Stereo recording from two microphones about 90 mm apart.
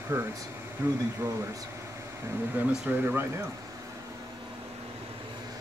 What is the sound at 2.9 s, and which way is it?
Speech, 25° right (ahead or behind).